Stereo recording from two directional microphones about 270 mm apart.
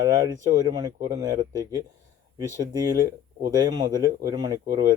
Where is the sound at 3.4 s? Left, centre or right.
Centre.